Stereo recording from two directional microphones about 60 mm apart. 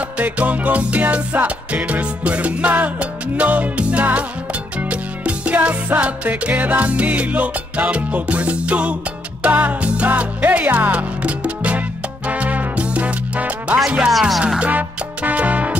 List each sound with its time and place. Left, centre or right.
0.2 s music: right
13.7 s speech: centre
14.6 s music: right